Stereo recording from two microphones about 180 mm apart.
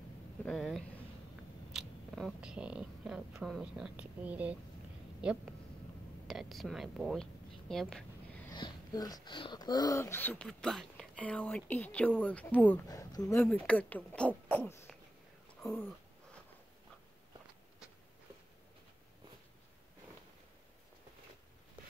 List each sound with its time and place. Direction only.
0.5 s speech: centre (ahead or behind)
8.5 s speech: 25° left (ahead or behind)
12.8 s speech: 20° left (ahead or behind)
13.4 s speech: 5° left (ahead or behind)
15.6 s a sound: 5° left (ahead or behind)